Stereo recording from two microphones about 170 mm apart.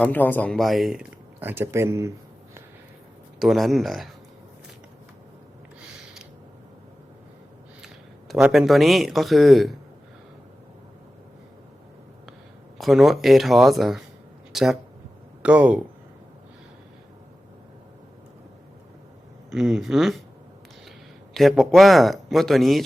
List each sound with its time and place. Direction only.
0.0 s speech: 10° left (ahead or behind); by 2.1 s 15° right (ahead or behind)
3.3 s speech: centre (ahead or behind)
8.3 s speech: 5° right (ahead or behind)
12.8 s speech: centre (ahead or behind)
19.5 s speech: 5° right (ahead or behind)
21.3 s speech: centre (ahead or behind)